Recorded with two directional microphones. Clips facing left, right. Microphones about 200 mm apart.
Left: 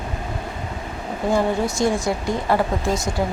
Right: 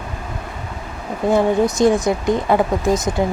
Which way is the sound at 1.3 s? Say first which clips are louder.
Right 5 dB; 20° right (ahead or behind).